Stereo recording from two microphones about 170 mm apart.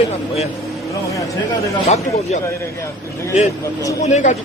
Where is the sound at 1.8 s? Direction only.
40° left (ahead or behind).